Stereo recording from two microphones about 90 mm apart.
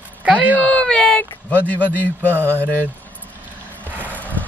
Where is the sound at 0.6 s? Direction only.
10° left (ahead or behind).